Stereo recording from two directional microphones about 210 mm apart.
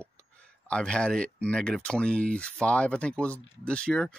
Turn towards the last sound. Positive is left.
turn(degrees=5)  # may be behind; listen again after turning